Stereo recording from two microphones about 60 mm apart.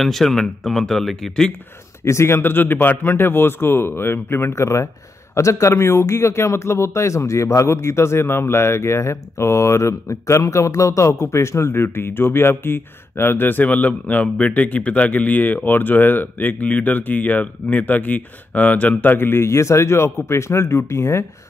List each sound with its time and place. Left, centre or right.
0.0 s speech: centre
2.0 s a man's voice: left